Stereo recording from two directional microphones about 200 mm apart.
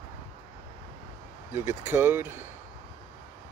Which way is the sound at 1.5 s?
10° right (ahead or behind).